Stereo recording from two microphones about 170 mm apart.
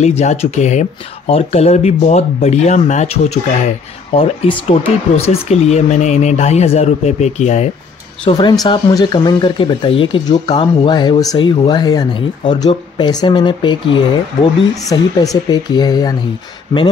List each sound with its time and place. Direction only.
0.0 s speech: 40° left (ahead or behind)
8.3 s speech: 25° left (ahead or behind)